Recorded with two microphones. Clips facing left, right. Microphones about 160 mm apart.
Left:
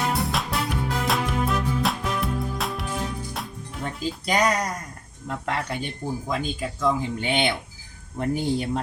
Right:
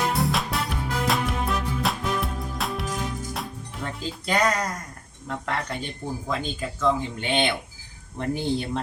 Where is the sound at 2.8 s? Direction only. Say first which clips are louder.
Even; 45° right (ahead or behind).